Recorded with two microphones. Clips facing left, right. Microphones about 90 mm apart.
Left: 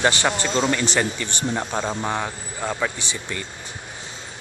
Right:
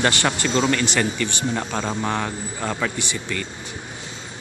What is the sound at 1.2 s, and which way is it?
Speech, 25° left (ahead or behind).